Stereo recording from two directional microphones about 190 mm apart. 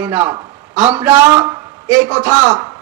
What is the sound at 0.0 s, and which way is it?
A man's voice, 10° right (ahead or behind).